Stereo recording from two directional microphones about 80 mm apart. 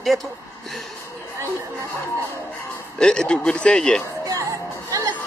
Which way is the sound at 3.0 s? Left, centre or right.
Centre.